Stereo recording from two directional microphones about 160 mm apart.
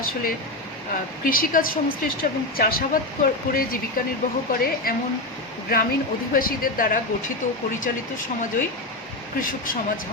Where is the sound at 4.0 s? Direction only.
65° left (ahead or behind).